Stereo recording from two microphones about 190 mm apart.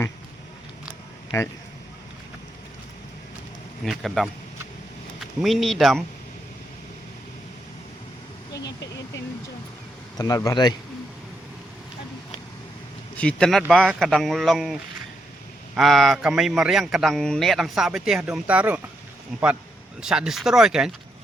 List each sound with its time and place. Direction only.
1.3 s speech: 15° left (ahead or behind)
3.8 s a man's voice: centre (ahead or behind)
8.5 s speech: 65° left (ahead or behind)
10.2 s a man's voice: 20° left (ahead or behind)
13.1 s a man's voice: 5° left (ahead or behind)
20.0 s a man's voice: 5° right (ahead or behind)